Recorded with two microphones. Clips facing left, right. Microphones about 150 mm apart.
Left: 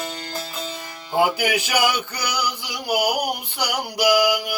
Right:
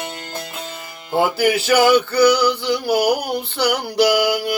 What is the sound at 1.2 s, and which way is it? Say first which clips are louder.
Music: right 3 dB; 15° left (ahead or behind).